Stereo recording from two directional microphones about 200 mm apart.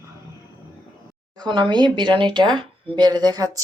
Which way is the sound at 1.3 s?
20° right (ahead or behind).